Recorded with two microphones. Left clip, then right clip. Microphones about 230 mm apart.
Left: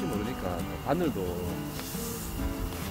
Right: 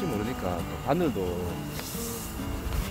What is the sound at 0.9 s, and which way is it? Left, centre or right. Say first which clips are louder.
Speech: right 2 dB; centre.